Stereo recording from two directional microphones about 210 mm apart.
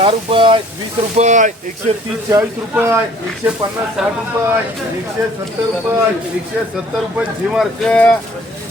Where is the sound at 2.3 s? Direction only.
15° right (ahead or behind).